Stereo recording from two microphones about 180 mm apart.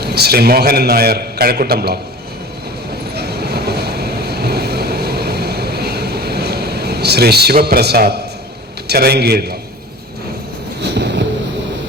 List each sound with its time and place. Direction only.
0.0 s a man's voice: 60° right (ahead or behind)
3.2 s vehicle: 65° right (ahead or behind)
8.9 s a man's voice: 60° right (ahead or behind)
10.8 s a sound: 70° right (ahead or behind)